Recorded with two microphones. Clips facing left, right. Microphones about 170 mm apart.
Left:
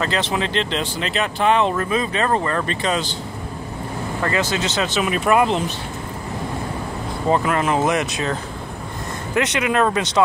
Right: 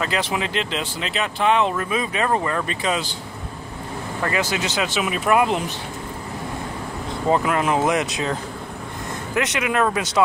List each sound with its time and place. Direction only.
0.0 s speech: 10° right (ahead or behind)
4.2 s speech: 15° right (ahead or behind)
7.2 s speech: 10° right (ahead or behind)
9.3 s speech: 5° right (ahead or behind)